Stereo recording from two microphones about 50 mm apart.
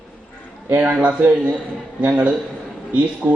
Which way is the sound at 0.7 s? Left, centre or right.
Right.